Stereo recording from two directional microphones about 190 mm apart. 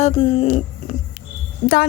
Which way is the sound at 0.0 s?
30° left (ahead or behind).